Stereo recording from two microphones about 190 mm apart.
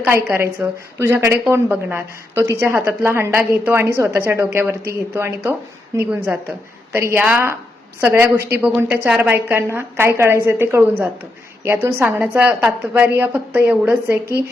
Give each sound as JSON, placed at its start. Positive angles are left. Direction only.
{"t": 0.0, "sound": "a woman's voice", "side_deg": -10}